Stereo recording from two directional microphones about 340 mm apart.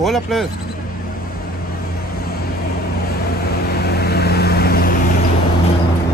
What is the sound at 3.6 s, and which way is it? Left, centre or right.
Vehicle, left.